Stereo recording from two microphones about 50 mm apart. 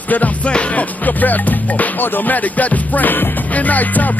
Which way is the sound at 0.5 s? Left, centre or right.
Left.